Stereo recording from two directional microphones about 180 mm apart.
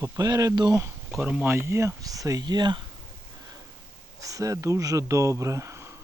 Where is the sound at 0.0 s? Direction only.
20° right (ahead or behind).